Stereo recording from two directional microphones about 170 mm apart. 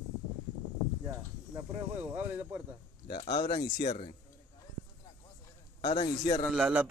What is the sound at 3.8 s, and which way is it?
Speech, 40° left (ahead or behind).